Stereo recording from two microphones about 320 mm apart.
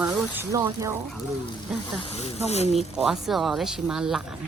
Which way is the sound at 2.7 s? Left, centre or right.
Centre.